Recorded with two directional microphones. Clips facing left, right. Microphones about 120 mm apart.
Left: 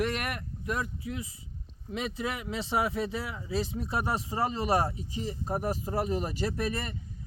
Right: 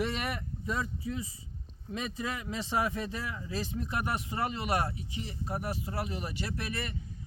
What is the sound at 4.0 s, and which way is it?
Speech, 30° left (ahead or behind).